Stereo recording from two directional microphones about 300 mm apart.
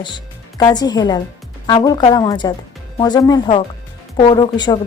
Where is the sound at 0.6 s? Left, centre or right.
Centre.